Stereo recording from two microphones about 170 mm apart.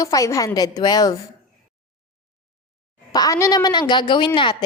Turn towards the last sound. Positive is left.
turn(degrees=30)  # may be behind; listen again after turning